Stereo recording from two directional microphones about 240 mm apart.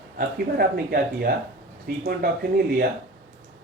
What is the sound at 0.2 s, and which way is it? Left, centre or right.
Speech, right.